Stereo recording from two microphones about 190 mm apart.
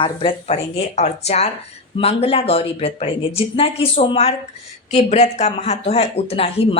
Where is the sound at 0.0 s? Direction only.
30° left (ahead or behind).